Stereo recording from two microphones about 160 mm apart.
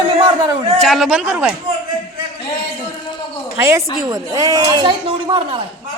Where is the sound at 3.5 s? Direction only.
15° right (ahead or behind).